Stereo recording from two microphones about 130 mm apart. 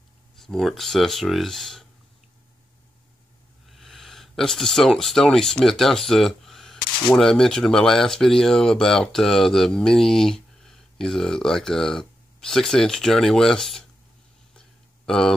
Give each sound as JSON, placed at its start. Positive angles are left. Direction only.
{"t": 0.4, "sound": "speech", "side_deg": 0}
{"t": 3.6, "sound": "speech", "side_deg": 0}
{"t": 14.5, "sound": "a sound", "side_deg": 5}